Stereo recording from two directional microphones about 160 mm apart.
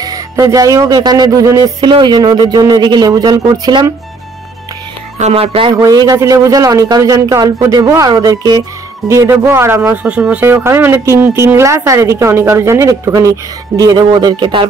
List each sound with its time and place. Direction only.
0.0 s speech: 20° right (ahead or behind)
5.2 s speech: 40° right (ahead or behind)
5.8 s speech: 20° right (ahead or behind)